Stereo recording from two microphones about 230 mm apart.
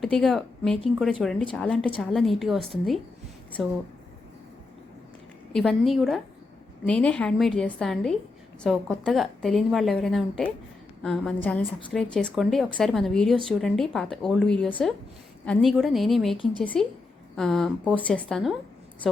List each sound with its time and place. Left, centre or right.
0.0 s a woman's voice: centre
5.5 s a woman's voice: centre